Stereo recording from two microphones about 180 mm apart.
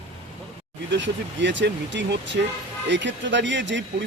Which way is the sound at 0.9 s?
80° right.